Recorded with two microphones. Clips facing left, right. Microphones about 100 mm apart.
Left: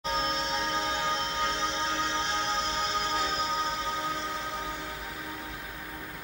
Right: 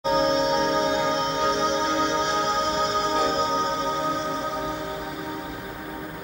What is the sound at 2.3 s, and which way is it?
Music, 65° right (ahead or behind).